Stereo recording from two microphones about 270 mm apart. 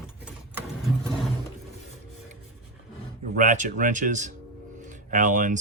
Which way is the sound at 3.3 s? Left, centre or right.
Right.